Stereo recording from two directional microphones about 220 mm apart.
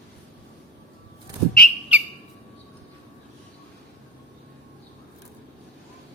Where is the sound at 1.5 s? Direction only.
Centre (ahead or behind).